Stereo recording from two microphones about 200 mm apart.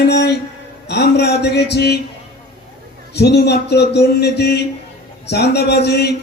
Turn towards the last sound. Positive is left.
turn(degrees=55)  # may be behind; listen again after turning